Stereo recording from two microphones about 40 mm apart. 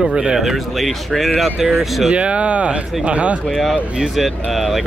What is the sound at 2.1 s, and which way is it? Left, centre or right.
Speech, right.